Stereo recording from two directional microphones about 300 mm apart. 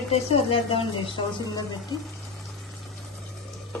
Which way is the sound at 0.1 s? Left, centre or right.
Centre.